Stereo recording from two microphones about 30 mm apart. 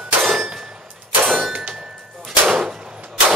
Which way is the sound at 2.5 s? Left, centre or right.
Right.